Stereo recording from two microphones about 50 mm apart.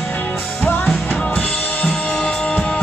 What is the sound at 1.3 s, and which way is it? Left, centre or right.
Drum kit, left.